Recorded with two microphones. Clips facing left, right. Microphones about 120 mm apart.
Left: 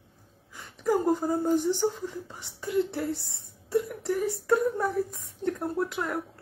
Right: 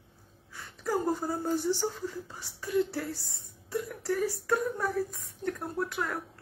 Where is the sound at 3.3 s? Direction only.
25° left (ahead or behind).